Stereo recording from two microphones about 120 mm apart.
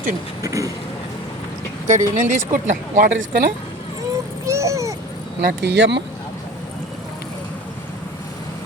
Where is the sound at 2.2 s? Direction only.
90° right.